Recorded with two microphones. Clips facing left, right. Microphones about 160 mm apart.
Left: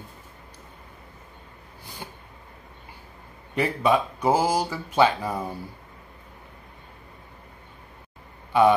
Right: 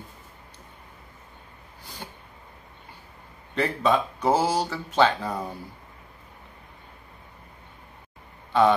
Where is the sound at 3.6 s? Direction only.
10° left (ahead or behind).